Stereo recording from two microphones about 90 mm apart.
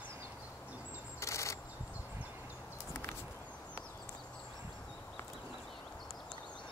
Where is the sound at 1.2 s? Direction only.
35° left (ahead or behind).